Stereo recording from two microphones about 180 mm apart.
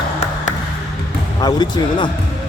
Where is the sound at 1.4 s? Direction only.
25° left (ahead or behind).